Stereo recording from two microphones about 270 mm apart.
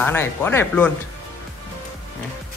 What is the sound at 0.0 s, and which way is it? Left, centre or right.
Speech, centre.